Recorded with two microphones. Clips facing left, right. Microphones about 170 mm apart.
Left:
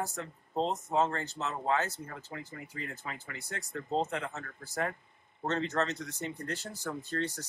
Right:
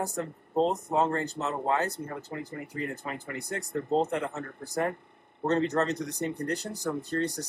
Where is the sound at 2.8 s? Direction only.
55° right (ahead or behind).